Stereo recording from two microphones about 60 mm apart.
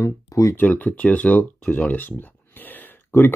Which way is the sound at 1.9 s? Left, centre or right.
Left.